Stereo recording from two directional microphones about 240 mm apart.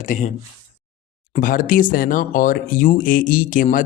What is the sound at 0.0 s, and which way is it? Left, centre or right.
Speech, left.